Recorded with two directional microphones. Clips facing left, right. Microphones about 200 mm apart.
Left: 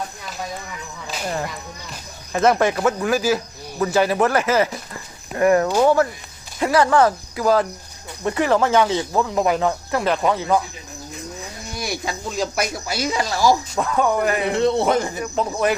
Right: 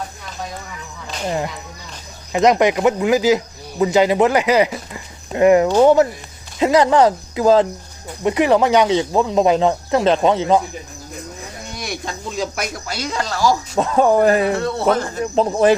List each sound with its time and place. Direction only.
1.0 s music: 5° left (ahead or behind)
2.3 s speech: 15° right (ahead or behind)
11.7 s speech: 5° left (ahead or behind)
13.7 s speech: 30° right (ahead or behind)
14.5 s speech: 20° left (ahead or behind)
15.2 s speech: 30° right (ahead or behind)